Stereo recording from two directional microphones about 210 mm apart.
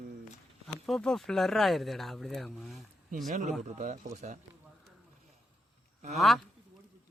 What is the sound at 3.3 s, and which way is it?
Speech, 35° right (ahead or behind).